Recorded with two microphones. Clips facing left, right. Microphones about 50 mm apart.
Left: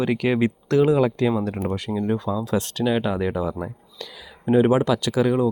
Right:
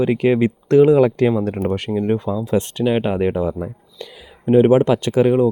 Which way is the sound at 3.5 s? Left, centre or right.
Right.